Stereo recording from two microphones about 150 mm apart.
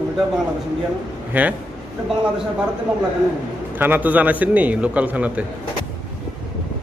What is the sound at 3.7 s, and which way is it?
A man's voice, 10° right (ahead or behind).